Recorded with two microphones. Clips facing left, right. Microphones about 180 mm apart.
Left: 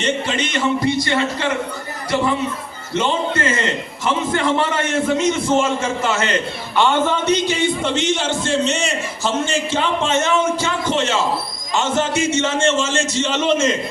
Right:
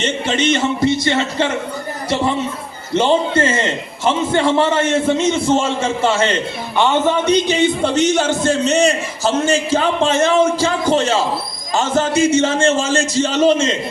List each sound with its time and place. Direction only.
0.0 s a man's voice: 25° right (ahead or behind)
2.9 s a man's voice: 30° right (ahead or behind)
6.7 s a man's voice: 15° right (ahead or behind)
7.8 s a man's voice: 40° right (ahead or behind)